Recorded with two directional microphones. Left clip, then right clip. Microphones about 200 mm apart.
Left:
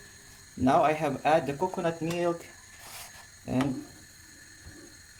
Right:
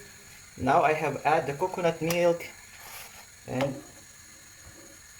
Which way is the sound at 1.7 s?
10° left (ahead or behind).